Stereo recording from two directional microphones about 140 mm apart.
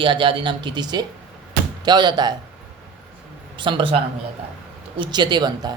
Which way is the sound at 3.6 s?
35° right (ahead or behind).